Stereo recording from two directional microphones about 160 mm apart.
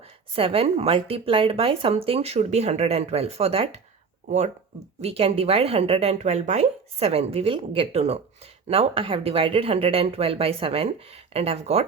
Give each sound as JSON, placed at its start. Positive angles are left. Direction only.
{"t": 0.3, "sound": "speech", "side_deg": -35}
{"t": 4.9, "sound": "speech", "side_deg": -40}